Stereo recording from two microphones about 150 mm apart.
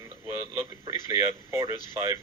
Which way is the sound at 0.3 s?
20° right (ahead or behind).